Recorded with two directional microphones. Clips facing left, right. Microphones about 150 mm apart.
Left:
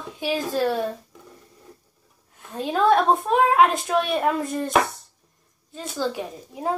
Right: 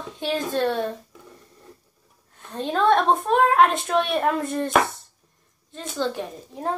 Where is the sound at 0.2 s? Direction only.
5° left (ahead or behind).